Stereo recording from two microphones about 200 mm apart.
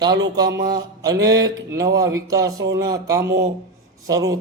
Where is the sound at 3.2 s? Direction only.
55° right (ahead or behind).